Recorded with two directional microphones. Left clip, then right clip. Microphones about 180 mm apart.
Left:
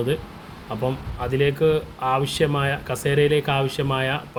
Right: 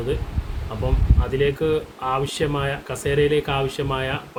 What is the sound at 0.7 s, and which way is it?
Speech, 35° left (ahead or behind).